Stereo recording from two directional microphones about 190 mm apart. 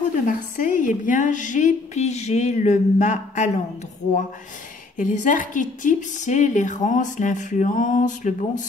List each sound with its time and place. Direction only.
0.3 s a woman's voice: 45° left (ahead or behind)
4.9 s speech: 45° left (ahead or behind)